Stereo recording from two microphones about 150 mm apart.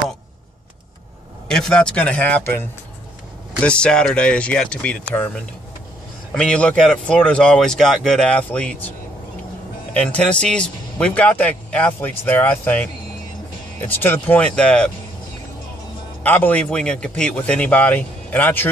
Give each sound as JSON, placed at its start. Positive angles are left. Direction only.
{"t": 1.5, "sound": "a man's voice", "side_deg": 5}
{"t": 3.6, "sound": "a man's voice", "side_deg": 5}
{"t": 9.9, "sound": "a man's voice", "side_deg": 10}
{"t": 16.2, "sound": "a man's voice", "side_deg": 10}